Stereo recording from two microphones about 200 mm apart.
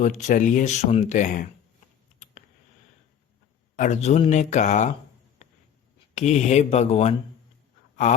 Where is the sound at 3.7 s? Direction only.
35° left (ahead or behind).